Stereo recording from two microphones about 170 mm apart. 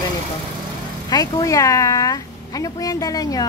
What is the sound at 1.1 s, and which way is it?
Speech, 25° left (ahead or behind).